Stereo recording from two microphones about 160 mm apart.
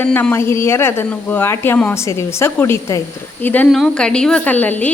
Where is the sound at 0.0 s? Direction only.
10° left (ahead or behind).